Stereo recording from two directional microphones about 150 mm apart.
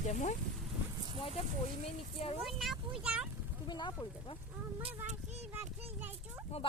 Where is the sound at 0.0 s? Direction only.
55° left (ahead or behind).